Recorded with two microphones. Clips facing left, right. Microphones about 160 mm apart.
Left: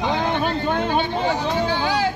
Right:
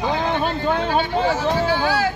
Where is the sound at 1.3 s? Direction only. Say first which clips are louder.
Right 2 dB; 20° left (ahead or behind).